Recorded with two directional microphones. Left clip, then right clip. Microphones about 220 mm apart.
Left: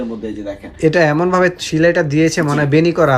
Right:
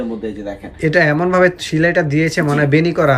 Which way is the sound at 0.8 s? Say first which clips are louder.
Left 1 dB; 10° left (ahead or behind).